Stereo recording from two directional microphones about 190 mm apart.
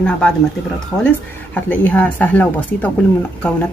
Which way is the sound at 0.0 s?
5° left (ahead or behind).